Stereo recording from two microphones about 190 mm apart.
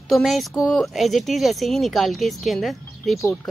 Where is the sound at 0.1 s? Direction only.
Centre (ahead or behind).